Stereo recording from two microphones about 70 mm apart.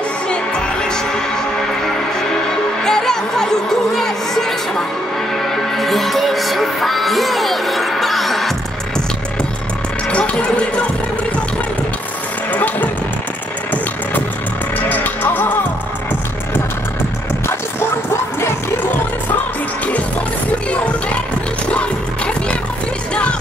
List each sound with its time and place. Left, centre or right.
0.3 s music: centre
2.8 s music: centre
12.5 s music: left
14.9 s music: left
21.7 s music: centre